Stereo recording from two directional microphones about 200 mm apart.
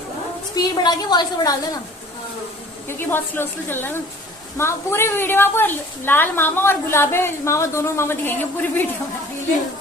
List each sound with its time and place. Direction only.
0.5 s a woman's voice: 20° left (ahead or behind)
3.0 s a woman's voice: 10° left (ahead or behind)